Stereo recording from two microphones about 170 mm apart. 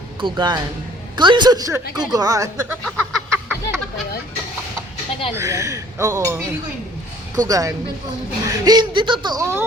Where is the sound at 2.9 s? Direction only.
15° right (ahead or behind).